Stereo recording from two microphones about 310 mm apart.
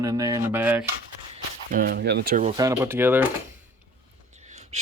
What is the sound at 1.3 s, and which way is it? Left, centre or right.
Speech, right.